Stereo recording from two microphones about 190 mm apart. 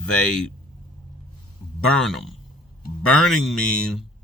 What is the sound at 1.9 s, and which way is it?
Speech, centre (ahead or behind).